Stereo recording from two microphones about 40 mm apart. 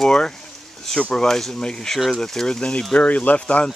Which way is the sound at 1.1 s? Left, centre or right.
Centre.